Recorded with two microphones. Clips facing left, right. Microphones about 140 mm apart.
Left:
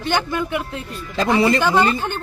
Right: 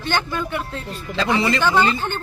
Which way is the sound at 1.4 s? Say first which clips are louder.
Left 7 dB; 50° left (ahead or behind).